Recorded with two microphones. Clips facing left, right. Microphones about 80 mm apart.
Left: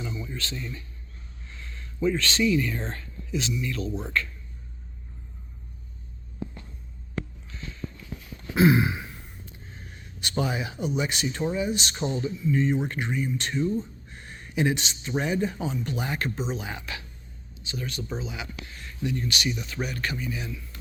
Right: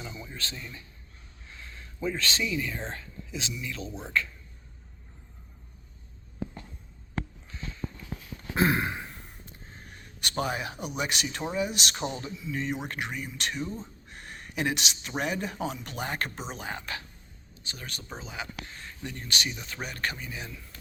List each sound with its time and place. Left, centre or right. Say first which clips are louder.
0.5 s speech: left 6 dB; centre
1.5 s a sound: left 7 dB; right
2.4 s speech: left 7 dB; centre
2.9 s whispering: left 6 dB; right
3.8 s a man's voice: left 3 dB; right
8.5 s a sound: left 5 dB; right
11.5 s speech: left 2 dB; right
14.1 s a sound: left 3 dB; right
15.2 s speech: left 3 dB; right